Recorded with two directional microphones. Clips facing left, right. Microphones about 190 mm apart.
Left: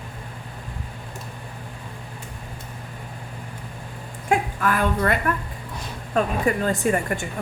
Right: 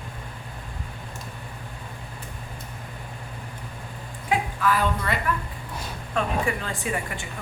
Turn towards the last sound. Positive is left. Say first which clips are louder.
# left 7 dB
turn(degrees=45)  # may be behind; listen again after turning